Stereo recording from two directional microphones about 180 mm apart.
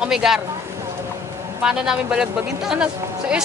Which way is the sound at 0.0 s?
5° right (ahead or behind).